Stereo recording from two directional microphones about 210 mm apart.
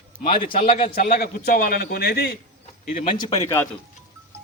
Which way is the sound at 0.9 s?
45° left (ahead or behind).